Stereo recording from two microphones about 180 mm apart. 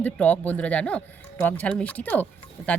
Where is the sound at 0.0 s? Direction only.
10° left (ahead or behind).